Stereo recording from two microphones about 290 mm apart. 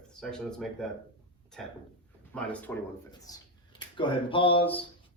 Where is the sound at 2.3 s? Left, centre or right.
Centre.